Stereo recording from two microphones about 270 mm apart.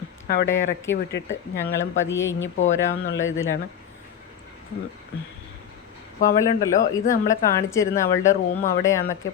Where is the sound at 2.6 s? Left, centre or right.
Left.